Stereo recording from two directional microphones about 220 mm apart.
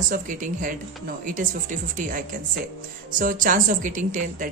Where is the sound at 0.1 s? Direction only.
35° right (ahead or behind).